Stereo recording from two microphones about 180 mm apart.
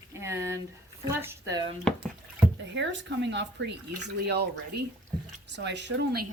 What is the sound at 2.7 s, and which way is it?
Speech, 85° right.